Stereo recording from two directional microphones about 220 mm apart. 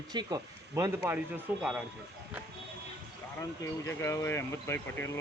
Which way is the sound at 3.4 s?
10° left (ahead or behind).